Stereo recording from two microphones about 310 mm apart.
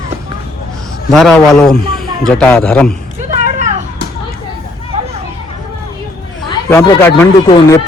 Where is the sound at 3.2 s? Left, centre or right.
Right.